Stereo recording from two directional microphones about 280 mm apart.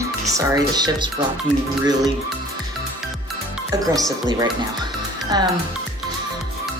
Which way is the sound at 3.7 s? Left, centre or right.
Centre.